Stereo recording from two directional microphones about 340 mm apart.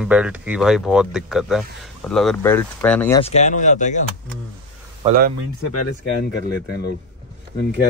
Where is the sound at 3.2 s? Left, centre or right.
Centre.